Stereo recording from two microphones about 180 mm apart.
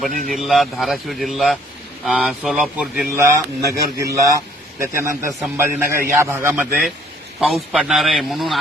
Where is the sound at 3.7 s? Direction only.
15° right (ahead or behind).